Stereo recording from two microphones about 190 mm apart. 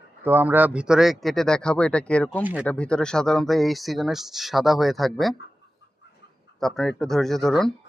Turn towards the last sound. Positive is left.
turn(degrees=0)  # may be behind; listen again after turning